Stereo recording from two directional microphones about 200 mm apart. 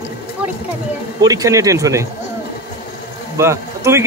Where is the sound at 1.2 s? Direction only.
15° right (ahead or behind).